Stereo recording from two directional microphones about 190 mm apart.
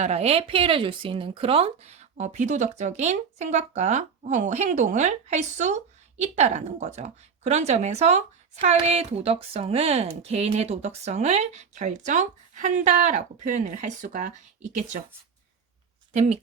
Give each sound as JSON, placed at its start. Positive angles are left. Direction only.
{"t": 0.0, "sound": "speech", "side_deg": -35}
{"t": 16.1, "sound": "speech", "side_deg": -35}